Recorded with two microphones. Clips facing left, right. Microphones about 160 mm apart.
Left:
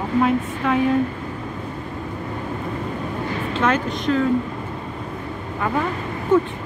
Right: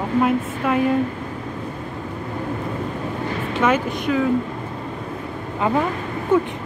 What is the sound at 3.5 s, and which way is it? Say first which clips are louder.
Speech: right 2 dB; 10° right (ahead or behind).